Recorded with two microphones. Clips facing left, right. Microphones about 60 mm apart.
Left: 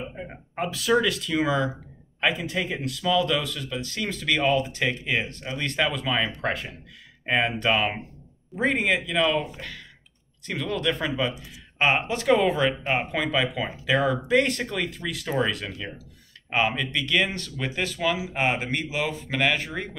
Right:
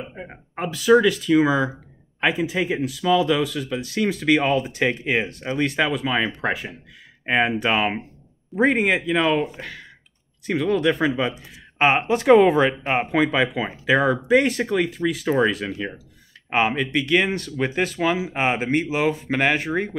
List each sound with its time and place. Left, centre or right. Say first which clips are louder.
0.6 s speech: right 6 dB; centre
2.1 s a sound: right 3 dB; centre
2.5 s speech: right 5 dB; centre
5.7 s speech: left 1 dB; centre
15.2 s speech: right 5 dB; right